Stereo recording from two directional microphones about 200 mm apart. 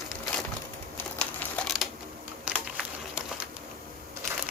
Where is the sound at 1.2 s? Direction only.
5° left (ahead or behind).